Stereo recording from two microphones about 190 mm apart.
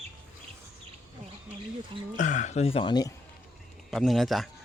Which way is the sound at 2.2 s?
40° left (ahead or behind).